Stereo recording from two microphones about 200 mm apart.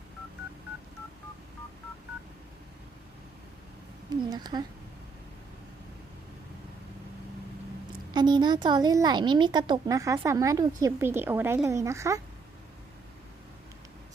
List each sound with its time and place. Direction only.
4.3 s speech: 20° right (ahead or behind)
8.1 s speech: 20° right (ahead or behind)